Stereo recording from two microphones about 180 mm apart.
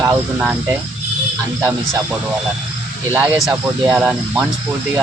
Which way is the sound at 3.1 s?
5° right (ahead or behind).